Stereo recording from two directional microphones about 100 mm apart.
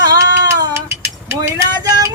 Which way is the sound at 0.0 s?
35° right (ahead or behind).